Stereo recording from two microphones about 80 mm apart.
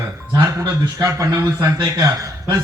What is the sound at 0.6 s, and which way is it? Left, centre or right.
A man's voice, right.